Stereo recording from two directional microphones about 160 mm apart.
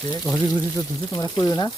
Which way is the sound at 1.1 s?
20° left (ahead or behind).